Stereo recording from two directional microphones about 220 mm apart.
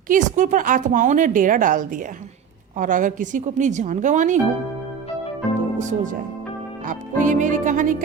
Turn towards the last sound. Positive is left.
turn(degrees=-35)  # may be behind; listen again after turning